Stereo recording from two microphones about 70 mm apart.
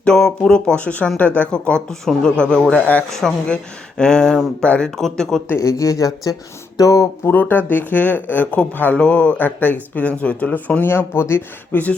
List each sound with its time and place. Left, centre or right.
0.0 s speech: centre
4.9 s speech: centre
5.5 s speech: left
7.3 s speech: left
11.7 s speech: left